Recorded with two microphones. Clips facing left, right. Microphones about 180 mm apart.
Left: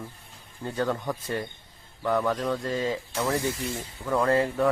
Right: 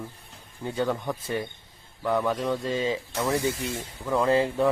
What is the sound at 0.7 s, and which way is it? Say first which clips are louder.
Speech: right 1 dB; 20° right (ahead or behind).